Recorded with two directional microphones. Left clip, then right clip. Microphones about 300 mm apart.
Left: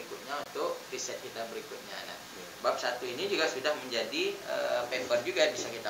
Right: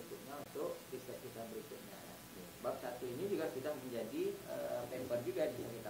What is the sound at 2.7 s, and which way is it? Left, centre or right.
Speech, centre.